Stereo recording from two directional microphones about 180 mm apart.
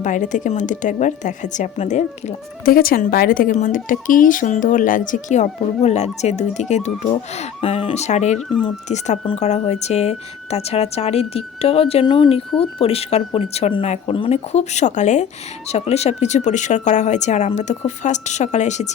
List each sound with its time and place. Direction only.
0.0 s a woman's voice: 45° left (ahead or behind)
8.4 s speech: 5° left (ahead or behind)
8.9 s speech: 35° left (ahead or behind)